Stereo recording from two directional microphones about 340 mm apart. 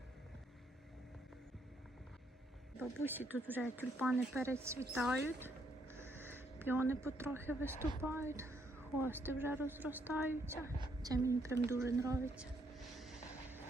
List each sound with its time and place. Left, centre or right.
2.7 s speech: centre
5.9 s a sound: centre
8.0 s a woman's voice: centre
13.0 s vehicle: centre